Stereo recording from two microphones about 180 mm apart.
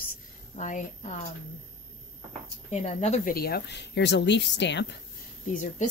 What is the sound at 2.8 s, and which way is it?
Speech, 40° left (ahead or behind).